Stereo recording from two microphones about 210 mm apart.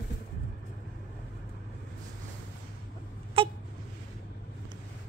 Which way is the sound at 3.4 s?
25° right (ahead or behind).